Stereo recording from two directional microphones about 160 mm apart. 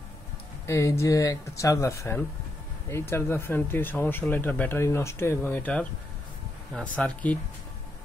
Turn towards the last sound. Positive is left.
turn(degrees=10)  # may be behind; listen again after turning